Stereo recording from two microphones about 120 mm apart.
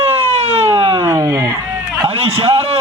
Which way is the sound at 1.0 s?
30° right (ahead or behind).